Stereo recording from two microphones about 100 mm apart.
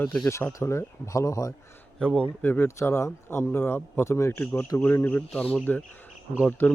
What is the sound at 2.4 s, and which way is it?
Speech, 25° left (ahead or behind).